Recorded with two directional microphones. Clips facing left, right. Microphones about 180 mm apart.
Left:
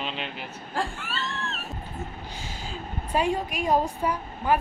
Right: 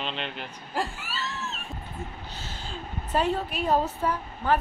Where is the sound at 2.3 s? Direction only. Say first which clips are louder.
Left 1 dB; 10° left (ahead or behind).